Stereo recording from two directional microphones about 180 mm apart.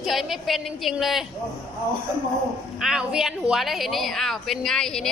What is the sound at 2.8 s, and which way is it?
Speech, 5° right (ahead or behind).